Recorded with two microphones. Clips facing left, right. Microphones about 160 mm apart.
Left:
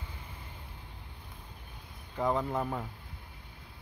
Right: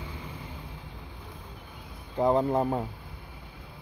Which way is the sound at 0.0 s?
90° right.